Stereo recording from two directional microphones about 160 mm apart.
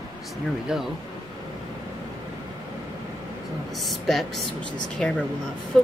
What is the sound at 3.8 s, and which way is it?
Speech, centre (ahead or behind).